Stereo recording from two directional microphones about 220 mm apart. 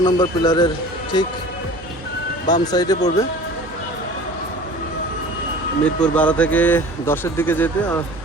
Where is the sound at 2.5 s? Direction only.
15° left (ahead or behind).